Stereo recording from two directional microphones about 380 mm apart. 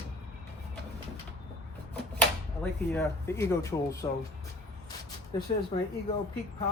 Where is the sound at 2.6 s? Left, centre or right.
Centre.